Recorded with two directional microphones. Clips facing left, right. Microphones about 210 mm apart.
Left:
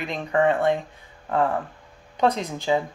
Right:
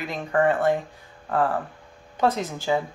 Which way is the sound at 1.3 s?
Centre (ahead or behind).